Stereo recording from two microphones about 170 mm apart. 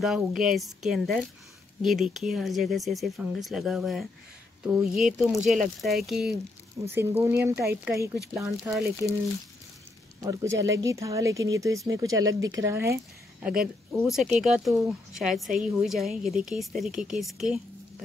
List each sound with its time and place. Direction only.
0.0 s speech: centre (ahead or behind)
6.9 s speech: 15° right (ahead or behind)
10.2 s speech: 20° right (ahead or behind); by 17.6 s centre (ahead or behind)